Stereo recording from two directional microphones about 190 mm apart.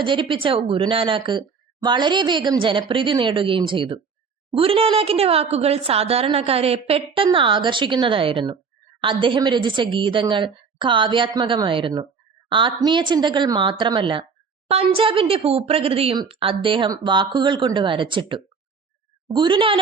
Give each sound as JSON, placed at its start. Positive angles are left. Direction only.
{"t": 0.0, "sound": "a woman's voice", "side_deg": -25}